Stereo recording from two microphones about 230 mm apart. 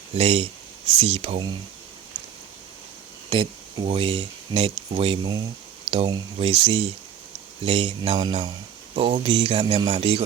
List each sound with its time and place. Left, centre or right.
0.2 s speech: right
3.2 s speech: right